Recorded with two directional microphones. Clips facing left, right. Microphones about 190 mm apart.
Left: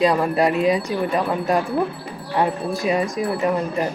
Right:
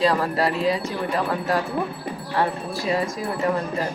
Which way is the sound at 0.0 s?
20° left (ahead or behind).